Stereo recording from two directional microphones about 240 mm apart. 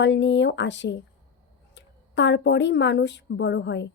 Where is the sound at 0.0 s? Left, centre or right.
Left.